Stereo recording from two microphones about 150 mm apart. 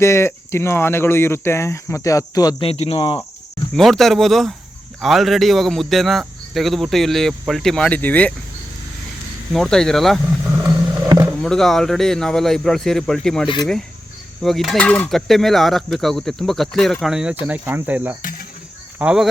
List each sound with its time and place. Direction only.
0.0 s speech: 15° left (ahead or behind)
2.6 s speech: 40° left (ahead or behind)
3.8 s speech: centre (ahead or behind)
9.5 s speech: 5° left (ahead or behind)
10.5 s vehicle: 20° right (ahead or behind)
11.4 s speech: 5° left (ahead or behind)
18.2 s cricket: 65° left (ahead or behind)
18.9 s speech: 5° right (ahead or behind)